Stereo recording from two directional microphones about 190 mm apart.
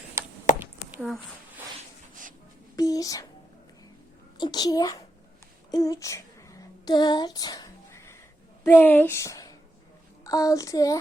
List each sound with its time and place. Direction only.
0.5 s a sound: 45° left (ahead or behind)
2.7 s child singing: 20° left (ahead or behind)
4.4 s a child's voice: 20° left (ahead or behind)
5.7 s a sound: 20° left (ahead or behind)
8.6 s speech: 10° left (ahead or behind)
10.2 s child singing: 20° left (ahead or behind)